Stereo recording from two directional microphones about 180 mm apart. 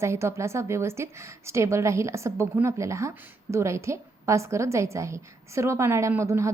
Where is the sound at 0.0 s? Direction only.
15° right (ahead or behind).